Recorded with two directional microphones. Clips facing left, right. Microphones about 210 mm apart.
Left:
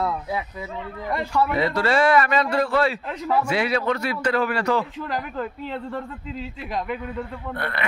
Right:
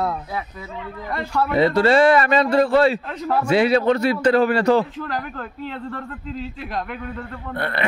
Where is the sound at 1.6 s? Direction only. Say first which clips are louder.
Right 9 dB; 25° right (ahead or behind).